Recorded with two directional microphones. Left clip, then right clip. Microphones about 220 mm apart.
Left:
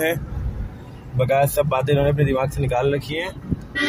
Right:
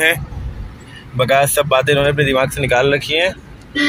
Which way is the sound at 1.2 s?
Centre (ahead or behind).